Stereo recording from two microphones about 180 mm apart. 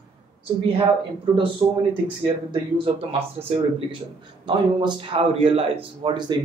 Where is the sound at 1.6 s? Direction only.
25° right (ahead or behind).